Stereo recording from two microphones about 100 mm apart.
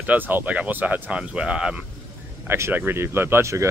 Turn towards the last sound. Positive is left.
turn(degrees=-30)  # may be behind; listen again after turning